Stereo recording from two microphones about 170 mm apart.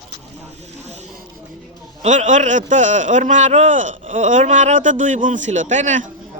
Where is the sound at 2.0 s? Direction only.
45° right (ahead or behind).